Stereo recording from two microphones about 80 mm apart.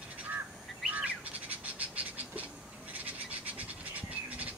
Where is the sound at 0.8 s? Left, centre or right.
Centre.